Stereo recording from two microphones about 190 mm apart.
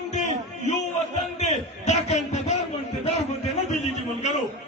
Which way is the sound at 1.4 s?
35° left (ahead or behind).